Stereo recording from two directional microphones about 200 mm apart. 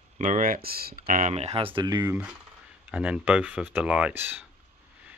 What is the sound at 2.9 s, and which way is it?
Speech, 5° right (ahead or behind).